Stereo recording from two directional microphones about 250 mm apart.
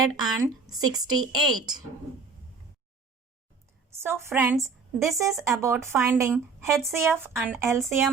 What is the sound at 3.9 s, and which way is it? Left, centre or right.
A woman's voice, centre.